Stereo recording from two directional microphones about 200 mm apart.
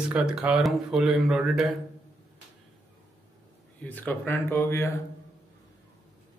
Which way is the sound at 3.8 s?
10° left (ahead or behind).